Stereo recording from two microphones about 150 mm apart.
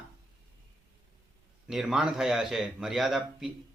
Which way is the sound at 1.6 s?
5° right (ahead or behind).